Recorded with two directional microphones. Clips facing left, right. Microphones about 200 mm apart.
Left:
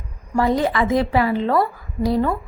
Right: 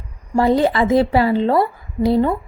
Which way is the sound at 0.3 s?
30° right (ahead or behind).